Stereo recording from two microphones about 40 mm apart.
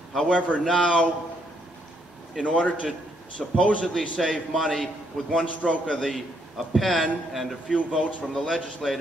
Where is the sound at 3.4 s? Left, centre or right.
Centre.